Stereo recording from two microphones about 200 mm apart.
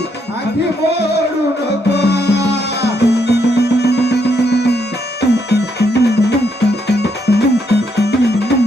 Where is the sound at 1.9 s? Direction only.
55° left (ahead or behind).